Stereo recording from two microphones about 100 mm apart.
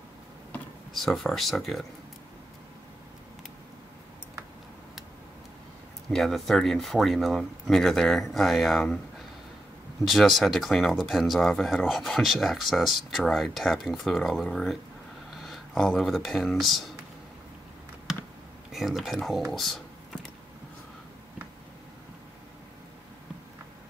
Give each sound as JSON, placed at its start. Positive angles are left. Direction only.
{"t": 0.9, "sound": "speech", "side_deg": 0}
{"t": 6.0, "sound": "speech", "side_deg": 5}
{"t": 10.0, "sound": "speech", "side_deg": 0}
{"t": 18.7, "sound": "speech", "side_deg": 0}
{"t": 19.5, "sound": "a sound", "side_deg": 0}